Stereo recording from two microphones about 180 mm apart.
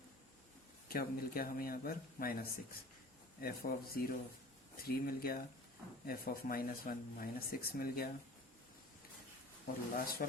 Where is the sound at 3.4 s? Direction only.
55° left (ahead or behind).